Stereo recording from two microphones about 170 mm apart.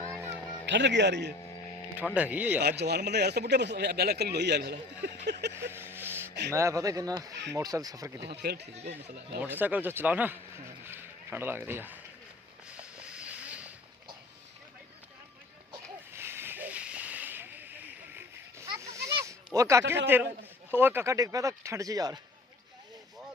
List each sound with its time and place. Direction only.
0.0 s music: 15° right (ahead or behind)
0.6 s speech: 90° right
2.1 s speech: 10° right (ahead or behind)
2.6 s speech: 75° right (ahead or behind)
5.7 s a sound: 15° right (ahead or behind)
6.5 s speech: 15° right (ahead or behind)
8.4 s speech: 75° right (ahead or behind)
9.4 s speech: 10° right (ahead or behind)
12.7 s a sound: 5° right (ahead or behind)
16.1 s hiss: 15° right (ahead or behind)
19.5 s speech: 15° right (ahead or behind)